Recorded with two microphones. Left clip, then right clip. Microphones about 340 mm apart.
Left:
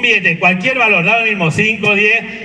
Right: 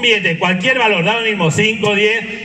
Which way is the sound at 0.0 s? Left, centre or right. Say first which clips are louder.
Left 2 dB; right.